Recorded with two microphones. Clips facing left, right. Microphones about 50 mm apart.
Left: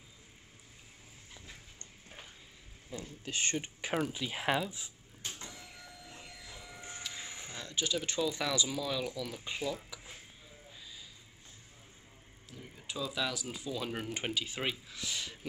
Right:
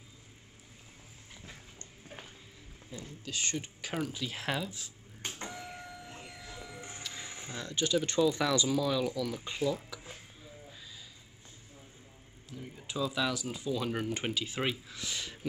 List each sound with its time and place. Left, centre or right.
3.3 s speech: left
5.2 s printer: right; by 6.8 s centre
7.0 s a sound: centre
7.5 s speech: centre
12.4 s speech: centre